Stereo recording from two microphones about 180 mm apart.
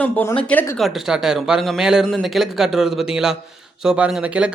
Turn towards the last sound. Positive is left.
turn(degrees=-5)  # may be behind; listen again after turning